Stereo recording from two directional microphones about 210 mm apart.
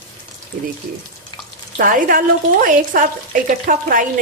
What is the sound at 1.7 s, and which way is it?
Speech, 40° right (ahead or behind).